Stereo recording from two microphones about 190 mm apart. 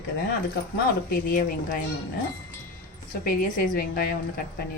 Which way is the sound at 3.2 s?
50° left (ahead or behind).